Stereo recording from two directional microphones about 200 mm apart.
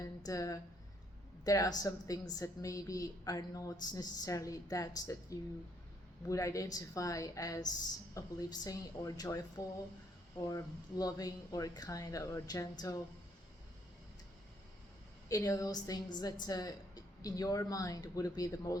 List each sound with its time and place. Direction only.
0.0 s a woman's voice: 20° left (ahead or behind)
15.3 s a woman's voice: 15° left (ahead or behind)